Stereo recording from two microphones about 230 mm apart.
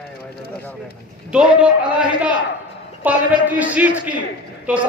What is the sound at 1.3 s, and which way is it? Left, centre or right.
A man's voice, centre.